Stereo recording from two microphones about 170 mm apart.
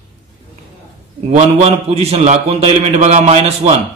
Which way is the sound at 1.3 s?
40° right (ahead or behind).